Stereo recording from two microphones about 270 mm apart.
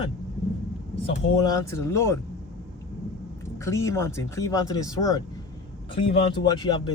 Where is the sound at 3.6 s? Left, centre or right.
Centre.